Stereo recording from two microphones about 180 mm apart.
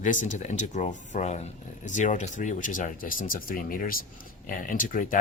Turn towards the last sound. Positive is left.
turn(degrees=50)  # may be behind; listen again after turning